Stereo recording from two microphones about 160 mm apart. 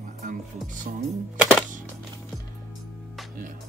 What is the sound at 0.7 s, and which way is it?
Speech, 50° right (ahead or behind).